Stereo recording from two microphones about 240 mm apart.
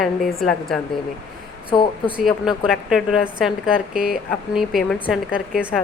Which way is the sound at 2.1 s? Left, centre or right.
Centre.